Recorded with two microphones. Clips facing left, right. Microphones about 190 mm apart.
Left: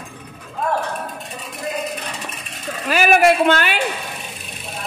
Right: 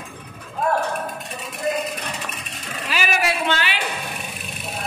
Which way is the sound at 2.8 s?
50° left (ahead or behind).